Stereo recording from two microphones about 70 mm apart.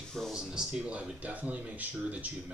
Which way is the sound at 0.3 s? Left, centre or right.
Centre.